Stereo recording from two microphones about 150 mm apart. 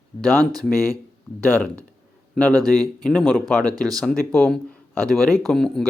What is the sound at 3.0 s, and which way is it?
Speech, 5° left (ahead or behind).